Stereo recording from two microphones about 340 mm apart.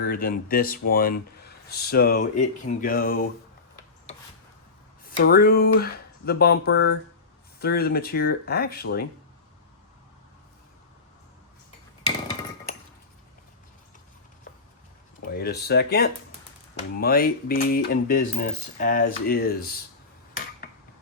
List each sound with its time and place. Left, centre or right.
0.0 s speech: left
5.0 s speech: left
15.3 s speech: left